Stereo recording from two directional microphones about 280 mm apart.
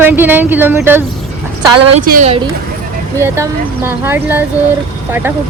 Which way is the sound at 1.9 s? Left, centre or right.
Right.